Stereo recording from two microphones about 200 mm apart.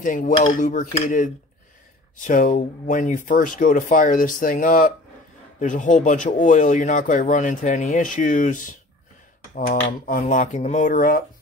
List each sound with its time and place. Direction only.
0.0 s speech: 40° left (ahead or behind)